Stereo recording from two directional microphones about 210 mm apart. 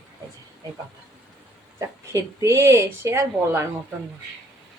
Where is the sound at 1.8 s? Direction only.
15° right (ahead or behind).